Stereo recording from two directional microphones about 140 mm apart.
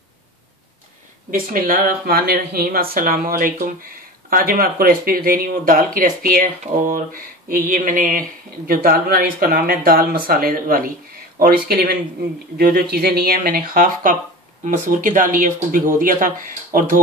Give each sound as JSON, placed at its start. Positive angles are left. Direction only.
{"t": 1.3, "sound": "speech", "side_deg": -90}
{"t": 14.6, "sound": "speech", "side_deg": -70}